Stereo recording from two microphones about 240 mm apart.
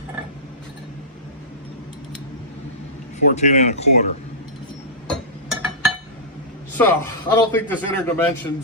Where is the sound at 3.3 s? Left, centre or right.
Left.